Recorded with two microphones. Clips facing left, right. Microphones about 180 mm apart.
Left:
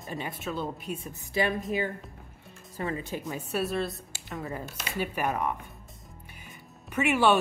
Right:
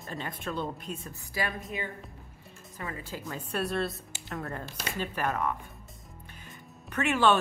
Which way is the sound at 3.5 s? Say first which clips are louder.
Left 1 dB; centre (ahead or behind).